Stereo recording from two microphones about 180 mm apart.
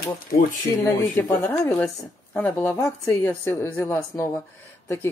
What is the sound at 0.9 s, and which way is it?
Speech, 15° left (ahead or behind).